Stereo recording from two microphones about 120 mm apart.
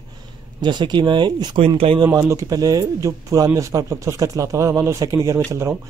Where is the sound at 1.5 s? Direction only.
50° right (ahead or behind).